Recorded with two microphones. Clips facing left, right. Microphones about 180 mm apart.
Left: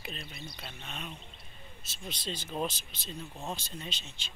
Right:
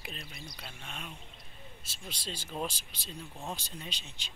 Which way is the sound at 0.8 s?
10° right (ahead or behind).